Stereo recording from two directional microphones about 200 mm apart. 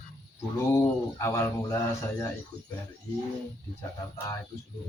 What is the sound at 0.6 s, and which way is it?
Speech, 15° left (ahead or behind).